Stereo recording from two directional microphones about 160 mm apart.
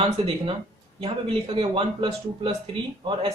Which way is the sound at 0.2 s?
35° right (ahead or behind).